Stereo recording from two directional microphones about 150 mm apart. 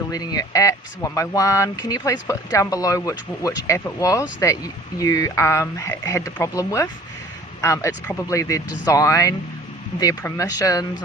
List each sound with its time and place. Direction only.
0.1 s speech: 25° left (ahead or behind)